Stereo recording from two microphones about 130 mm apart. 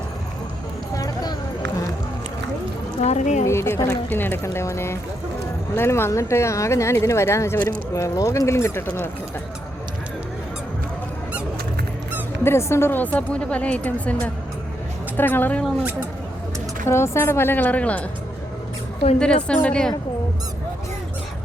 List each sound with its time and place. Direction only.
0.9 s a sound: 30° left (ahead or behind)
3.0 s speech: 60° left (ahead or behind)
3.4 s speech: 20° left (ahead or behind)
12.4 s a woman's voice: 20° left (ahead or behind)
15.6 s speech: 10° right (ahead or behind)
16.8 s a woman's voice: 20° left (ahead or behind)
19.5 s a woman's voice: 10° left (ahead or behind)